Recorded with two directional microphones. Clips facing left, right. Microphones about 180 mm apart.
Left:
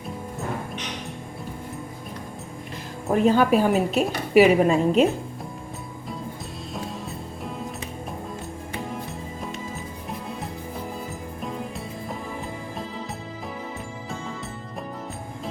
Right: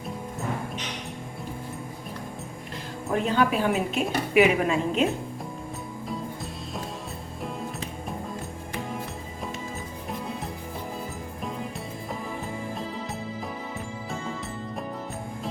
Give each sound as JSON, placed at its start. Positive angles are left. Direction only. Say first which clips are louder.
{"t": 3.1, "sound": "a woman's voice", "louder": "left 5 dB", "side_deg": 45}